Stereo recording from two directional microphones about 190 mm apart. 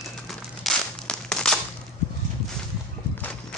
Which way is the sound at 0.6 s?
5° left (ahead or behind).